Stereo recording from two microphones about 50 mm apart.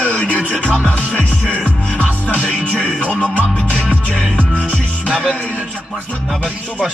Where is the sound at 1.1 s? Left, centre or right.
Right.